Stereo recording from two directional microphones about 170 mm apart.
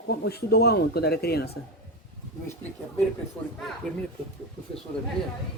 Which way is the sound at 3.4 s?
10° left (ahead or behind).